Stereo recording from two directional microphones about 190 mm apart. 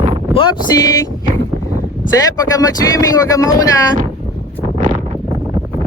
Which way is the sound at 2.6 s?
20° left (ahead or behind).